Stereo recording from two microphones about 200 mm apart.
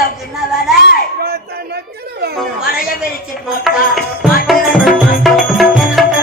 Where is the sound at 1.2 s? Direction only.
50° right (ahead or behind).